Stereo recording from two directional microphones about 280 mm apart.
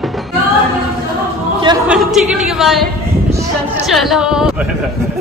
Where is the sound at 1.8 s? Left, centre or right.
Centre.